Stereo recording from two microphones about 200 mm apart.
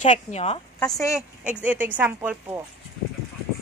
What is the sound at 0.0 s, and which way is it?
Speech, 35° left (ahead or behind).